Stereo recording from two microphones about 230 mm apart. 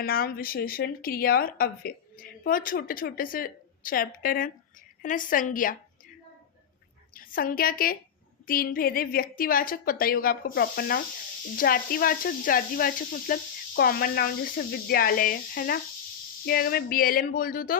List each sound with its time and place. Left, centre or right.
0.0 s a woman's voice: left
7.1 s a woman's voice: left